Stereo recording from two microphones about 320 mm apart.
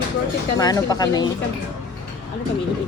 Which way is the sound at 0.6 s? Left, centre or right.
Centre.